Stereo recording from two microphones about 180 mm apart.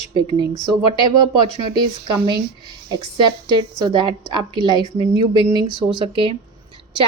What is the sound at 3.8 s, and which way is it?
A woman's voice, 25° right (ahead or behind).